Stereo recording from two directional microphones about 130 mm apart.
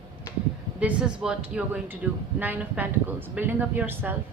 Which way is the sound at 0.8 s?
5° right (ahead or behind).